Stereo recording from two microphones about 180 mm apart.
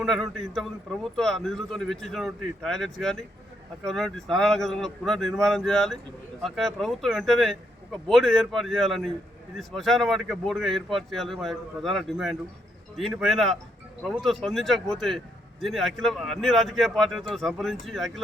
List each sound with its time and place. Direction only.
0.0 s a man's voice: centre (ahead or behind)